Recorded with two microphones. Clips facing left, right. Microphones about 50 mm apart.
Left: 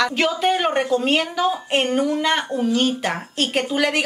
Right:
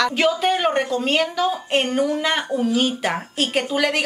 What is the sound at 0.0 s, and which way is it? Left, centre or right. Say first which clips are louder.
A woman's voice: right 1 dB; centre.